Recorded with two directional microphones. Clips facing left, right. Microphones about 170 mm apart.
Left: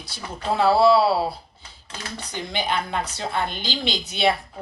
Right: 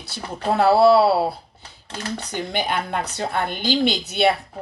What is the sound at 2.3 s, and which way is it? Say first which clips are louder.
A woman's voice: right 1 dB; 55° right (ahead or behind).